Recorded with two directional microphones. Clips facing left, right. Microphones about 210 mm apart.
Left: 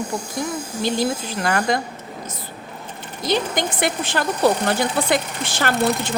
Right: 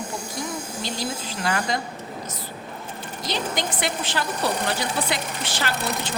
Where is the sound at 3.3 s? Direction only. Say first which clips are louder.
Left 6 dB; 50° left (ahead or behind).